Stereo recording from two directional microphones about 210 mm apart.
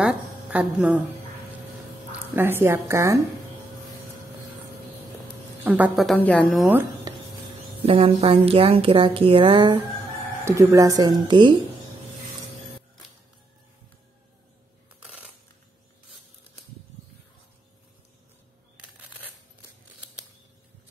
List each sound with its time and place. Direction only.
0.0 s a woman's voice: 5° right (ahead or behind)
2.1 s speech: 10° right (ahead or behind)
5.6 s speech: 5° right (ahead or behind)
6.6 s speech: 10° right (ahead or behind)
7.8 s a woman's voice: 25° right (ahead or behind)
10.4 s speech: 15° right (ahead or behind)
18.8 s a sound: 10° right (ahead or behind)